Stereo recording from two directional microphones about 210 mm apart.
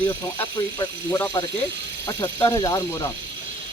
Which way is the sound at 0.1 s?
15° left (ahead or behind).